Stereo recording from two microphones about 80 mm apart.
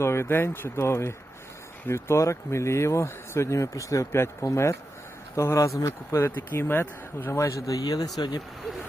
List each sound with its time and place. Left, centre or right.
0.0 s speech: left
6.1 s speech: left